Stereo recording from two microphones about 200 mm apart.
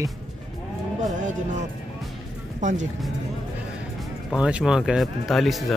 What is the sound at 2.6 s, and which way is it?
Speech, 35° right (ahead or behind).